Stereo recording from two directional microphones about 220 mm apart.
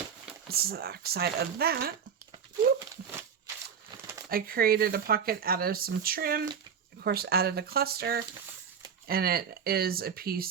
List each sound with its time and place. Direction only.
0.4 s speech: 45° right (ahead or behind)
2.7 s a sound: 15° right (ahead or behind)
4.3 s speech: 45° right (ahead or behind)